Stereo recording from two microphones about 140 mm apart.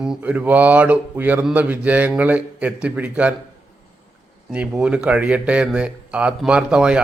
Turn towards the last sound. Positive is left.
turn(degrees=-5)  # may be behind; listen again after turning